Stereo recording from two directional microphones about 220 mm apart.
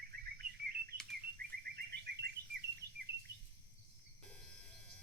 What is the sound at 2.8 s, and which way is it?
Bird, 45° right (ahead or behind).